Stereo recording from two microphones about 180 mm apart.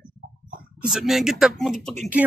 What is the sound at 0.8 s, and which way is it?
Speech, centre (ahead or behind).